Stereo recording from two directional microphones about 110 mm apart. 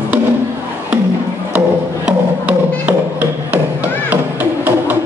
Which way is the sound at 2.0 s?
15° right (ahead or behind).